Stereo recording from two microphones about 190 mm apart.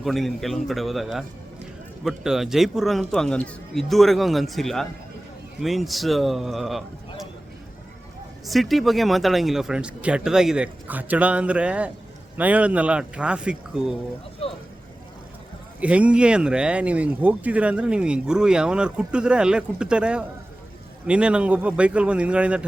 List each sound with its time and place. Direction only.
0.0 s speech: centre (ahead or behind)
8.4 s speech: centre (ahead or behind)
14.4 s vehicle: 30° left (ahead or behind)
15.8 s speech: 5° right (ahead or behind)